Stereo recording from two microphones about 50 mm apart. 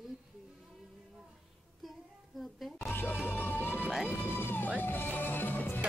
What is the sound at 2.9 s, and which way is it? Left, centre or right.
Music, left.